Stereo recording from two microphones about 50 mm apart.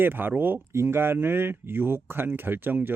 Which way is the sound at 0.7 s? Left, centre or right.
Right.